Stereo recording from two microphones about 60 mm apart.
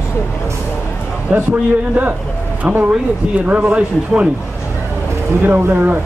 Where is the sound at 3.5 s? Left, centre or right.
Right.